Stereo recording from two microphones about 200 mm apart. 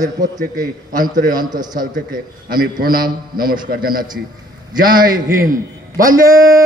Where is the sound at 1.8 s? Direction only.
45° right (ahead or behind).